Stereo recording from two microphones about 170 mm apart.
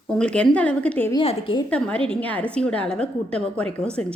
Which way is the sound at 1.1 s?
30° left (ahead or behind).